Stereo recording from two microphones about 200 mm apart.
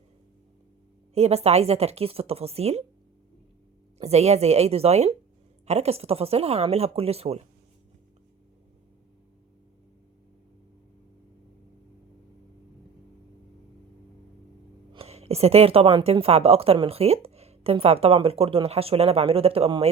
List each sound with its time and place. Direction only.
1.1 s speech: 30° right (ahead or behind)
3.9 s a woman's voice: 35° right (ahead or behind)
14.9 s a woman's voice: 30° right (ahead or behind)